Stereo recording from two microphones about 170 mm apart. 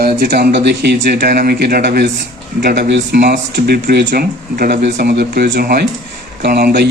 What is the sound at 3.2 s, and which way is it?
Speech, 60° right (ahead or behind).